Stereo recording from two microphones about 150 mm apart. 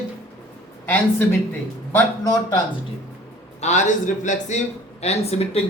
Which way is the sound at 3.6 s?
50° left (ahead or behind).